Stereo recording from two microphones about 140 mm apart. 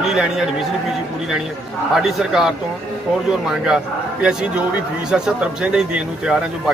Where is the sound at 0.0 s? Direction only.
5° right (ahead or behind).